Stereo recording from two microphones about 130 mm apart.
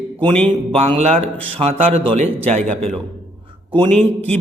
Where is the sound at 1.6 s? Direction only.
50° right (ahead or behind).